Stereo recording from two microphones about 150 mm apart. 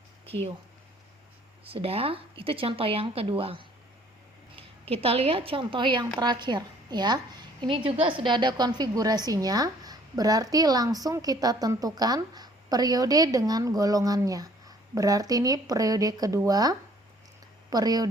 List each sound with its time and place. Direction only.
1.6 s a woman's voice: 40° right (ahead or behind)